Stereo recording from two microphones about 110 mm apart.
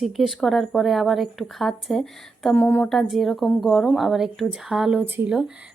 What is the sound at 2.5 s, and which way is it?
Speech, 15° left (ahead or behind).